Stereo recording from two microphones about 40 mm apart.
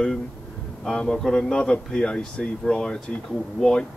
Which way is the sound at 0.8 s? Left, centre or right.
Left.